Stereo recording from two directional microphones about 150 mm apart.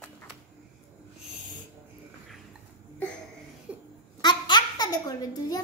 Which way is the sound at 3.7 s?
10° right (ahead or behind).